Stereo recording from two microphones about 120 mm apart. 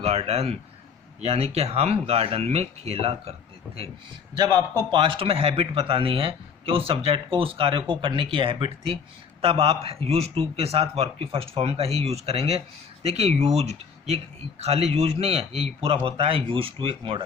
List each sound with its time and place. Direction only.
0.0 s a man's voice: 60° right (ahead or behind)
4.8 s a man's voice: 40° right (ahead or behind)